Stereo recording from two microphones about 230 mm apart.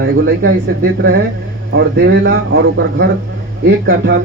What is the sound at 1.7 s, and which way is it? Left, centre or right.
A man's voice, right.